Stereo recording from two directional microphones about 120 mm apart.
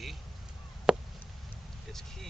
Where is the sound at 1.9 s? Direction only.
5° left (ahead or behind).